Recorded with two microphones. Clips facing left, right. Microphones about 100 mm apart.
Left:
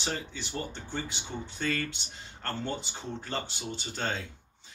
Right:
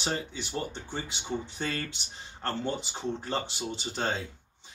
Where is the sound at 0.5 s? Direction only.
15° right (ahead or behind).